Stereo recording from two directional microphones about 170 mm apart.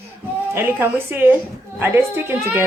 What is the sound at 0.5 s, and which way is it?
A woman's voice, 15° right (ahead or behind).